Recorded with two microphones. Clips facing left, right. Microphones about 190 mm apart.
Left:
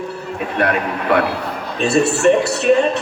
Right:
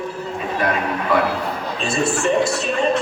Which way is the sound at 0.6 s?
65° left (ahead or behind).